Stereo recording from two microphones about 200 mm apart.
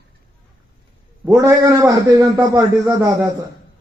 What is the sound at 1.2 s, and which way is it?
A man's voice, 15° right (ahead or behind).